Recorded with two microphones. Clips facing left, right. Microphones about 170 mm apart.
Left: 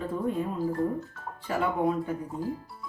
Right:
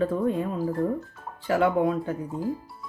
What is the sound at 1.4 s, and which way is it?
Speech, 85° right.